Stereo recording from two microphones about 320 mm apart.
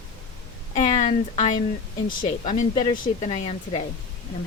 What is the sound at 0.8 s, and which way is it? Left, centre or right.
Speech, left.